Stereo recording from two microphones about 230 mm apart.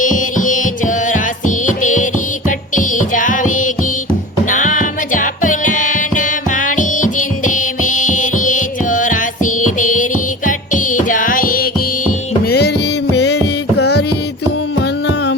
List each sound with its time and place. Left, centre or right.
0.0 s music: left